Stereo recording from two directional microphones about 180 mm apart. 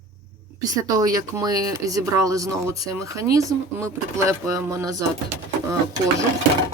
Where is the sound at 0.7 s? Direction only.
20° right (ahead or behind).